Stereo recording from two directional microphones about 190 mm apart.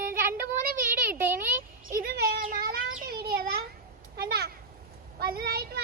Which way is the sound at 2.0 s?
50° right (ahead or behind).